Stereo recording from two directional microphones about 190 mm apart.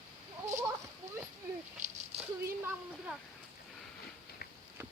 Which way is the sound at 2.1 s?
35° right (ahead or behind).